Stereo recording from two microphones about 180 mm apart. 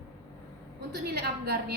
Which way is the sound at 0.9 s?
60° right (ahead or behind).